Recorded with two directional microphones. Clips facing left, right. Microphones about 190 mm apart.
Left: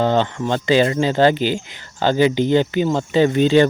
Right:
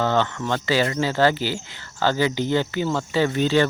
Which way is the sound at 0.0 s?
20° left (ahead or behind).